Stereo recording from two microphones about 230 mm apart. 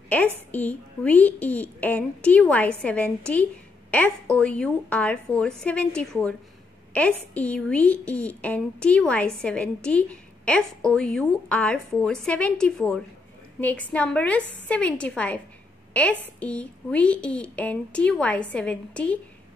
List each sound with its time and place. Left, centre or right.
0.5 s a woman's voice: centre